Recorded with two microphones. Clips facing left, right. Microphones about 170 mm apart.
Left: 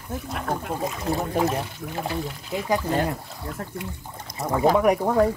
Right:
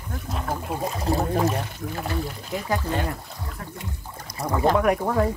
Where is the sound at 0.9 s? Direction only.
35° right (ahead or behind).